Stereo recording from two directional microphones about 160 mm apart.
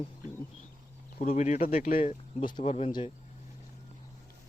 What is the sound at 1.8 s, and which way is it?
Speech, 60° left (ahead or behind).